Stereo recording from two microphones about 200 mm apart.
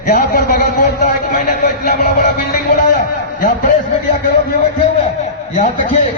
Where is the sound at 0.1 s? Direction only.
45° left (ahead or behind).